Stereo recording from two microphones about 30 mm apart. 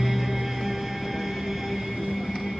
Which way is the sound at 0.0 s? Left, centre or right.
Centre.